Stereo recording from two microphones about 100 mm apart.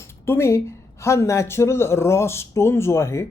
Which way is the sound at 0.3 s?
25° left (ahead or behind).